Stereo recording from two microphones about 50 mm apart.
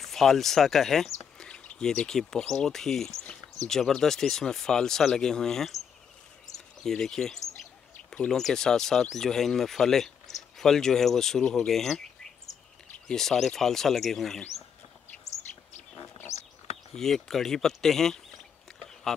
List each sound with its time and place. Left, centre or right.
0.0 s speech: centre
1.5 s bird: left
1.9 s speech: centre
13.1 s speech: centre
15.5 s a sound: left
16.9 s speech: centre